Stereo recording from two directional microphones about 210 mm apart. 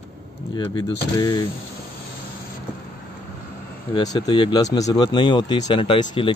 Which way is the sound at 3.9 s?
20° left (ahead or behind).